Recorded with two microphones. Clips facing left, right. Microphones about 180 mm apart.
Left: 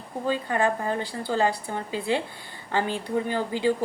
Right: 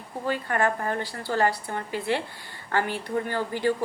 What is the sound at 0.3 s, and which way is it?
A woman's voice, 15° left (ahead or behind).